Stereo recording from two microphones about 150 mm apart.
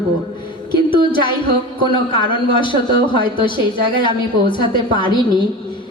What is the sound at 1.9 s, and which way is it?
A man's voice, 30° left (ahead or behind).